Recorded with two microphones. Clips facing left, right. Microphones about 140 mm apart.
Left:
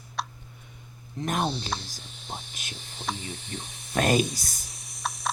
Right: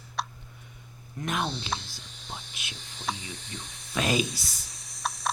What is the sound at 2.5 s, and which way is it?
Hum, 45° left (ahead or behind).